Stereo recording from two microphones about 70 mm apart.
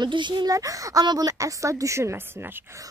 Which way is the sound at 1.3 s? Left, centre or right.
Right.